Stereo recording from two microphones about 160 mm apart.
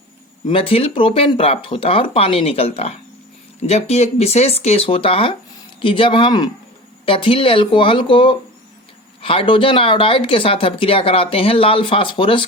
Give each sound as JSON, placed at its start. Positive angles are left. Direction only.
{"t": 0.4, "sound": "speech", "side_deg": 35}